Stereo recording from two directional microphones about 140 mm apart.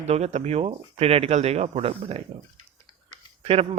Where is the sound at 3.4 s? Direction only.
45° right (ahead or behind).